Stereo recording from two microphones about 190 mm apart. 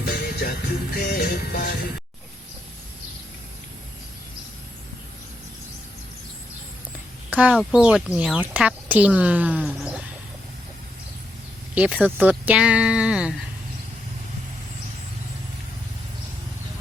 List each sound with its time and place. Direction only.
0.0 s music: 60° left (ahead or behind)
7.3 s a sound: 5° right (ahead or behind)
7.7 s speech: 5° right (ahead or behind)
11.7 s speech: 5° right (ahead or behind)